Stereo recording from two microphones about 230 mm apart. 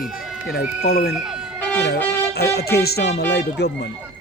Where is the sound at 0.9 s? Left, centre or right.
Left.